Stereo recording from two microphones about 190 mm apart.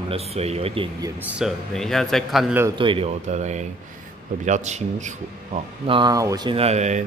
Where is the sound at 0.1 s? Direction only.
35° right (ahead or behind).